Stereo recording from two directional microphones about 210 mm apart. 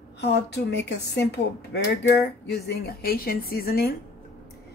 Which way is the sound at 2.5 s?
50° left (ahead or behind).